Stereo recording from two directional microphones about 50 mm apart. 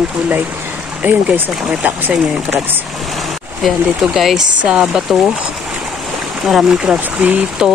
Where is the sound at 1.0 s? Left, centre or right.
Right.